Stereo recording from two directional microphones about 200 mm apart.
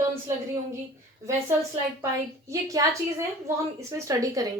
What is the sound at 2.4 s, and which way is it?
A woman's voice, 15° right (ahead or behind).